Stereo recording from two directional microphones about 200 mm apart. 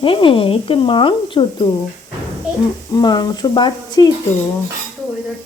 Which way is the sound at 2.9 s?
20° left (ahead or behind).